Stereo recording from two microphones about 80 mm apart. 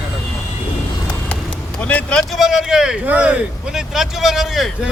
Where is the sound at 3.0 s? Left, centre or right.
Centre.